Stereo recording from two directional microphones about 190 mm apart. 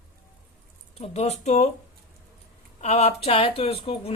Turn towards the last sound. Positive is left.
turn(degrees=30)  # may be behind; listen again after turning